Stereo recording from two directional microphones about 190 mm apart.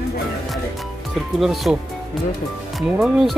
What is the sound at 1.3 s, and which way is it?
Speech, centre (ahead or behind).